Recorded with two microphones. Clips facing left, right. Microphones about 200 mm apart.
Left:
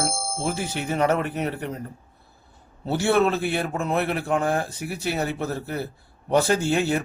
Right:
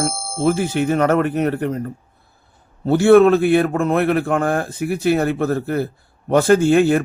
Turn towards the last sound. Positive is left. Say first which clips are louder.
# right 9 dB
turn(degrees=-55)  # may be behind; listen again after turning